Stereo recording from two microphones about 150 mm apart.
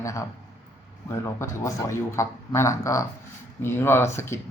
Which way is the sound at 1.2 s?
20° left (ahead or behind).